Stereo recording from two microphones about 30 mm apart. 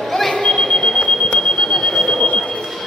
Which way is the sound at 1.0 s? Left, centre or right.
Left.